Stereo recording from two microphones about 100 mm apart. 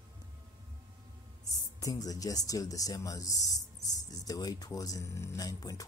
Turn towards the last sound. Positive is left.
turn(degrees=35)  # may be behind; listen again after turning